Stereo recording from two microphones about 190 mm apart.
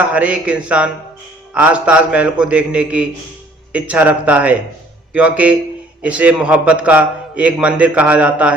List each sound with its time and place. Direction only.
0.0 s a man's voice: 5° right (ahead or behind)